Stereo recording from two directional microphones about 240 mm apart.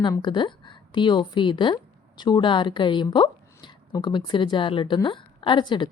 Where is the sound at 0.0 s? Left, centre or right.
Centre.